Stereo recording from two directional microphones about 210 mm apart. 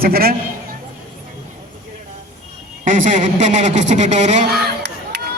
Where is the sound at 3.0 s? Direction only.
35° right (ahead or behind).